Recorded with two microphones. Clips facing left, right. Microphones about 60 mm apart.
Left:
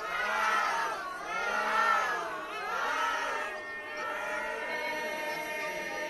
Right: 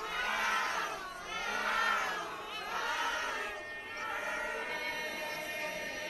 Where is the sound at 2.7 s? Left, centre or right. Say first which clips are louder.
Left 4 dB; left.